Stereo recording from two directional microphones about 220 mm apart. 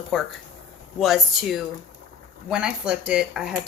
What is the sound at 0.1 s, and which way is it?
Speech, centre (ahead or behind).